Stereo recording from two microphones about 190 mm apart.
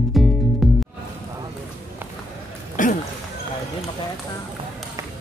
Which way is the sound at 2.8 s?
45° left (ahead or behind).